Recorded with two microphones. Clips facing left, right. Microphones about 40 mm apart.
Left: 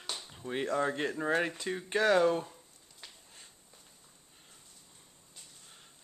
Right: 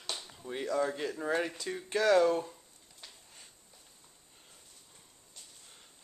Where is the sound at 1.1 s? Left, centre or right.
Centre.